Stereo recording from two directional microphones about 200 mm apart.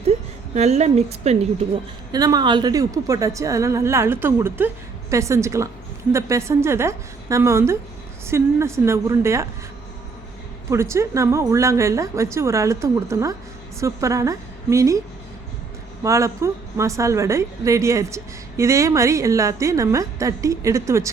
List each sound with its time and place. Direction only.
0.5 s a woman's voice: 35° right (ahead or behind)
2.1 s speech: 20° right (ahead or behind)
10.7 s a woman's voice: 15° right (ahead or behind)
16.0 s speech: 15° right (ahead or behind)